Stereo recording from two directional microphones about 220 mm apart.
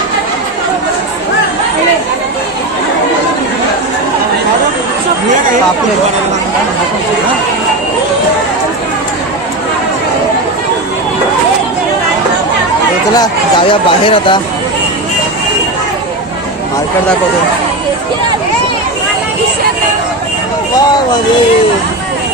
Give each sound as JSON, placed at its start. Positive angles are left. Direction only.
{"t": 13.1, "sound": "speech", "side_deg": 20}